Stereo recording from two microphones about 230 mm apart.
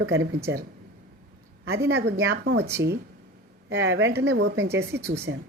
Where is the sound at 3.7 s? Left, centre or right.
Right.